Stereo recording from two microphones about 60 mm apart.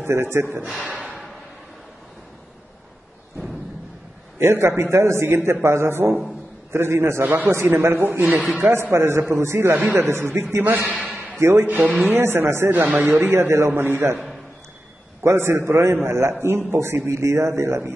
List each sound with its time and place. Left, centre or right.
0.0 s speech: right
0.8 s a sound: centre
4.4 s a man's voice: right
6.0 s a man's voice: centre
6.7 s a man's voice: right
7.2 s speech: right
8.4 s speech: right
8.9 s a man's voice: right
10.9 s a sound: right
11.3 s a man's voice: right
11.6 s speech: right
12.2 s speech: right
15.2 s a man's voice: right
17.1 s a man's voice: right